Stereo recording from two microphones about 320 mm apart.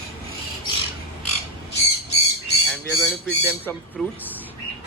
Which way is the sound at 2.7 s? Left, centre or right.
Centre.